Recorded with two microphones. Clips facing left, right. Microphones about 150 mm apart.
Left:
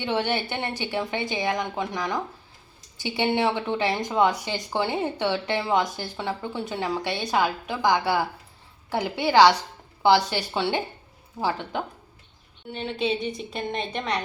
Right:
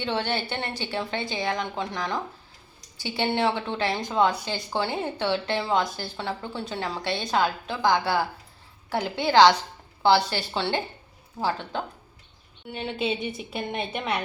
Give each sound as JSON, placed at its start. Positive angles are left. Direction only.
{"t": 0.0, "sound": "a woman's voice", "side_deg": 15}
{"t": 12.7, "sound": "a woman's voice", "side_deg": -5}